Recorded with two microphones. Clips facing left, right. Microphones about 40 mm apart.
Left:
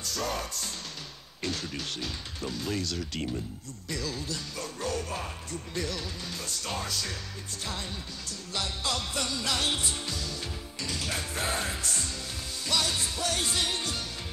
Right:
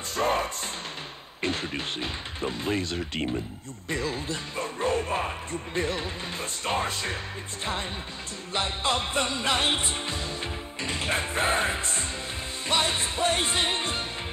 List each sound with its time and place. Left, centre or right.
0.0 s music: right
8.5 s music: right